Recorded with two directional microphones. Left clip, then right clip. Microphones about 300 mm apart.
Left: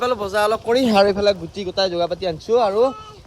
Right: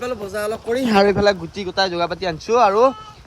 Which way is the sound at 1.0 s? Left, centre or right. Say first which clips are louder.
Right 1 dB; centre.